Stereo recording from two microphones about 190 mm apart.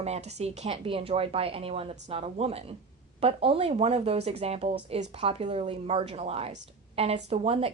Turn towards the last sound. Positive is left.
turn(degrees=-30)  # may be behind; listen again after turning